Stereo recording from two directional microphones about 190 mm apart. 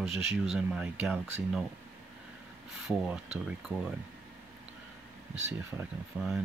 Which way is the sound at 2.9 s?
5° right (ahead or behind).